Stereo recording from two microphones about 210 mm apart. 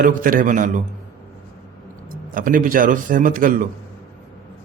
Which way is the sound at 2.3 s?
40° right (ahead or behind).